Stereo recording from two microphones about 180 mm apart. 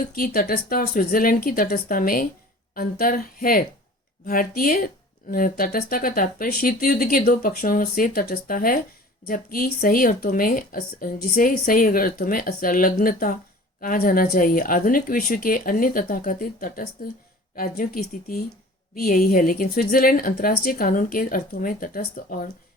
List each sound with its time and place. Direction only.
0.1 s speech: 55° left (ahead or behind)